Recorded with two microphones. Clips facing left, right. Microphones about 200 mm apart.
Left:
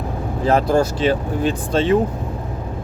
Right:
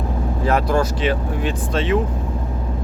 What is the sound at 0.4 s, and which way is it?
Speech, 30° left (ahead or behind).